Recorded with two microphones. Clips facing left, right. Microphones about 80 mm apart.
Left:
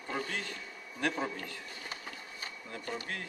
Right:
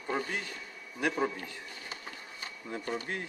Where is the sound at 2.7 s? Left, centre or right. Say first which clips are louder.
Right 4 dB; right.